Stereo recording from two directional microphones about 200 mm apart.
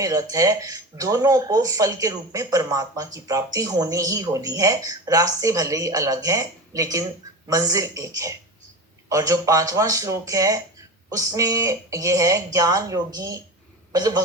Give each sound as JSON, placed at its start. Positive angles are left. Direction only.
{"t": 0.0, "sound": "a man's voice", "side_deg": -15}